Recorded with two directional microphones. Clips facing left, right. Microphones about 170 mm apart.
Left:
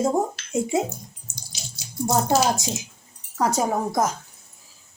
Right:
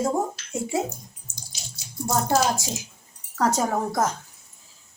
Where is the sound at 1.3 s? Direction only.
80° left.